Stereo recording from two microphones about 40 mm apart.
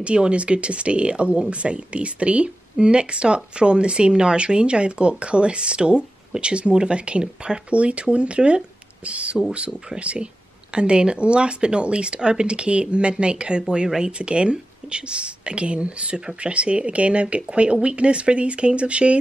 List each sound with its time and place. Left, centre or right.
0.0 s speech: right